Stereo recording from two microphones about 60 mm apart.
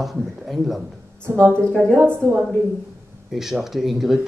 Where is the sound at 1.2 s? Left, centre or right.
Right.